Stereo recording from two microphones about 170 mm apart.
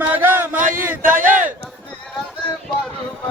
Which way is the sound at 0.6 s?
50° right (ahead or behind).